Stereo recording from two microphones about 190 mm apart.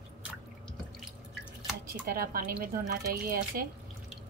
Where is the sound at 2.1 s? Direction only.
50° right (ahead or behind).